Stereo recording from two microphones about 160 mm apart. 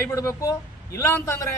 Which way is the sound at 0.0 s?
20° left (ahead or behind).